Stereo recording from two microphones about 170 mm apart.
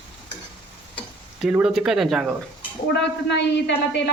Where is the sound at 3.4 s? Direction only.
90° left.